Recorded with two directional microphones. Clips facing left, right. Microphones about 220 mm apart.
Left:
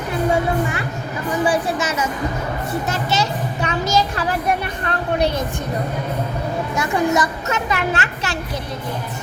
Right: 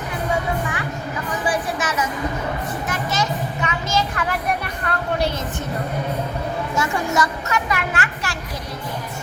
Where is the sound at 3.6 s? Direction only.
35° left (ahead or behind).